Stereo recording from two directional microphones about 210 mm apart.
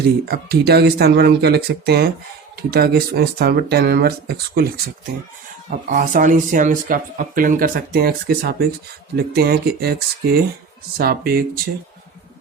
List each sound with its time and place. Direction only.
0.3 s speech: 50° right (ahead or behind)
5.7 s speech: 40° right (ahead or behind)